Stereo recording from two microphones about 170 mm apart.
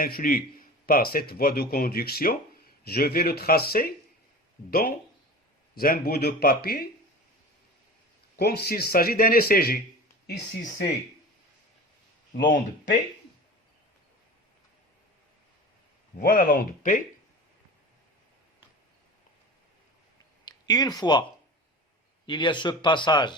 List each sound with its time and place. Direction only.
0.0 s speech: 60° left (ahead or behind)
8.4 s speech: 70° left (ahead or behind)
16.2 s speech: 55° left (ahead or behind)
20.4 s speech: 25° left (ahead or behind)
22.3 s speech: 30° left (ahead or behind)